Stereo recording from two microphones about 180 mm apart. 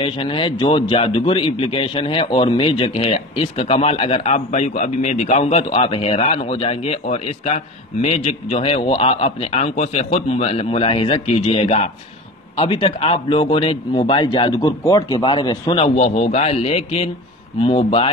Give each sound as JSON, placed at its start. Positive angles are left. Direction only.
{"t": 0.0, "sound": "a man's voice", "side_deg": 30}